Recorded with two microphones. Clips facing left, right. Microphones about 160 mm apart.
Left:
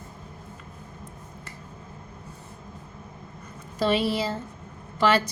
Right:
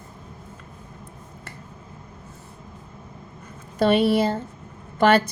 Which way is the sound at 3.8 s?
55° right (ahead or behind).